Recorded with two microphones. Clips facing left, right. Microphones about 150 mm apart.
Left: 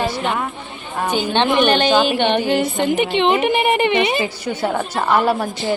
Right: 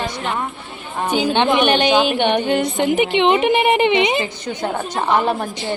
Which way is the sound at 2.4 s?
5° left (ahead or behind).